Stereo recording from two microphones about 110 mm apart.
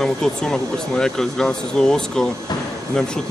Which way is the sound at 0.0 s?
5° left (ahead or behind).